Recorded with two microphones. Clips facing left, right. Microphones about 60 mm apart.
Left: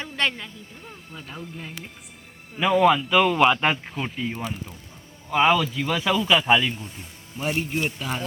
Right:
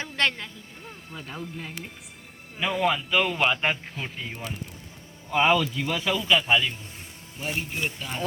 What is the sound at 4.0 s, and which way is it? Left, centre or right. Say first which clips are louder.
Speech: left 6 dB; left.